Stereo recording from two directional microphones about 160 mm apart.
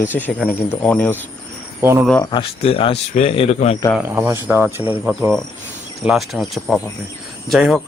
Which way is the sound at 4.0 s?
15° right (ahead or behind).